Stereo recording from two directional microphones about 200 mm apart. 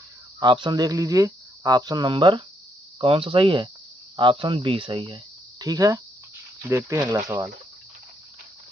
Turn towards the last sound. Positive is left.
turn(degrees=-15)  # may be behind; listen again after turning